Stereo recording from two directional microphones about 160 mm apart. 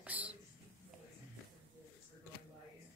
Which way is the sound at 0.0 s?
10° right (ahead or behind).